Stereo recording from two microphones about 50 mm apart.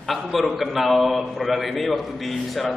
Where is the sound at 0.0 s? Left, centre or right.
Centre.